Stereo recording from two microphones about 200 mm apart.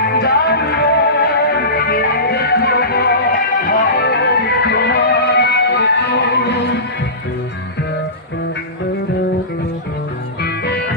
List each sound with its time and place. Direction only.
0.1 s music: 55° left (ahead or behind)
10.6 s music: 55° left (ahead or behind)